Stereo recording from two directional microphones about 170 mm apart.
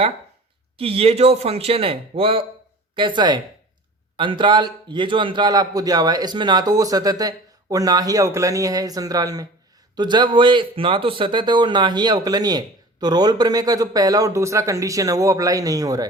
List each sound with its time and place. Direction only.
0.8 s speech: 35° right (ahead or behind)